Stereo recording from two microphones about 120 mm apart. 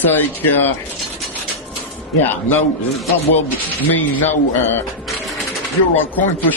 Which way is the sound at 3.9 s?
15° left (ahead or behind).